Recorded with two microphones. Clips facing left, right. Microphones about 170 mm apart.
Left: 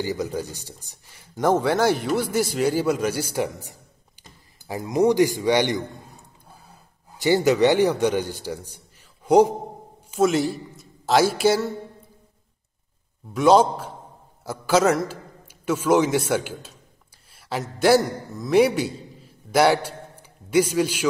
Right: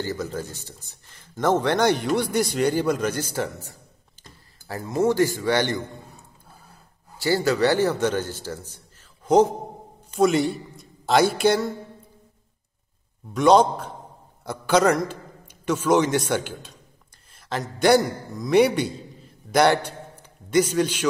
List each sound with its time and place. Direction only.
0.0 s speech: 15° left (ahead or behind)
7.2 s a man's voice: 20° left (ahead or behind)
13.3 s a man's voice: 5° left (ahead or behind)